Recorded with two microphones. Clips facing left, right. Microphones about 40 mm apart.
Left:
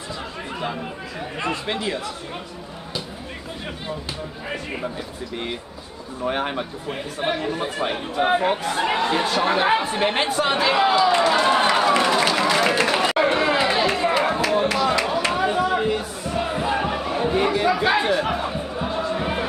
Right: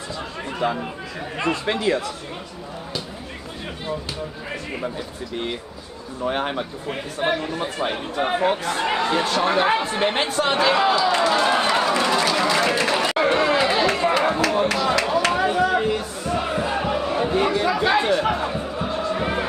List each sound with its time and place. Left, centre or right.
0.6 s speech: centre
6.2 s speech: centre
12.4 s a sound: centre
12.8 s chatter: centre
13.7 s run: centre
14.8 s a sound: centre
16.3 s battle cry: centre
17.4 s speech: centre
18.8 s music: centre